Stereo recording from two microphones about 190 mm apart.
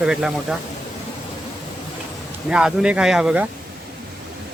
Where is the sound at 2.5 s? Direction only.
5° right (ahead or behind).